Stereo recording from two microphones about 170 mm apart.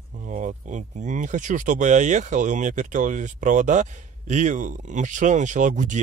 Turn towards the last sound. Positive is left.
turn(degrees=-45)  # may be behind; listen again after turning